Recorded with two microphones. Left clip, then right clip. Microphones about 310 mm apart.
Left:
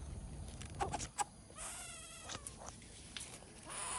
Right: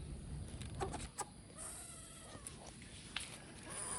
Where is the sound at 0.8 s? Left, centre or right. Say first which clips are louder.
Left 5 dB; left.